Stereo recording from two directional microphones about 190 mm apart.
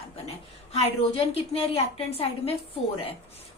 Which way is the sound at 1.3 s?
30° left (ahead or behind).